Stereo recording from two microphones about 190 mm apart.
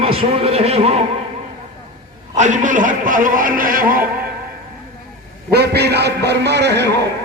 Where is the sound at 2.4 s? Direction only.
40° right (ahead or behind).